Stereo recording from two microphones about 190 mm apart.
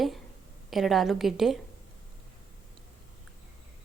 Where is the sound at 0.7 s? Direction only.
Centre (ahead or behind).